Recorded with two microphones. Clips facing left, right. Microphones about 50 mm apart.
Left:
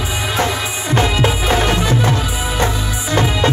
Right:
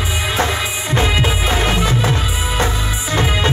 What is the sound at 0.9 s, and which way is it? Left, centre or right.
Music, right.